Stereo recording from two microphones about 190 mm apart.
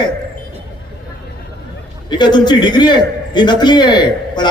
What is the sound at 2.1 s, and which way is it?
A man's voice, 25° left (ahead or behind).